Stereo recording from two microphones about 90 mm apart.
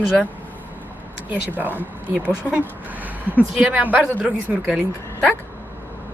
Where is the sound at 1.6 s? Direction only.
20° right (ahead or behind).